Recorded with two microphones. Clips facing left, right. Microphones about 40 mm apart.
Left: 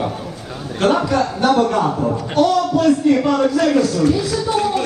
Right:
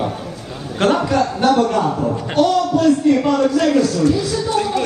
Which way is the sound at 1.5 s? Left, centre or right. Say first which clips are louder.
Left 1 dB; centre.